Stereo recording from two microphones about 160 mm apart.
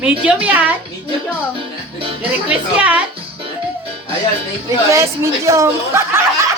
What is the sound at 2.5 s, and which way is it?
Speech, 10° right (ahead or behind).